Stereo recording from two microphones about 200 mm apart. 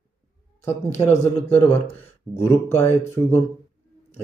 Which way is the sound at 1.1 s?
35° left (ahead or behind).